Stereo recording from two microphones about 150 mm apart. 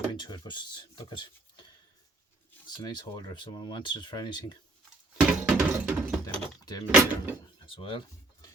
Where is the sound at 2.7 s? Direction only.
25° left (ahead or behind).